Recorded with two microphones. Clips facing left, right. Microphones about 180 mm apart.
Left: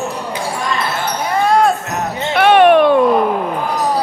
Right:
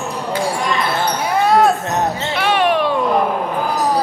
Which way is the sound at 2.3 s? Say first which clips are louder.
Left 9 dB; 55° left (ahead or behind).